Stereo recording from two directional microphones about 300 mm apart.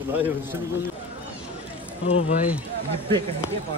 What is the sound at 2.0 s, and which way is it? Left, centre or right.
Speech, centre.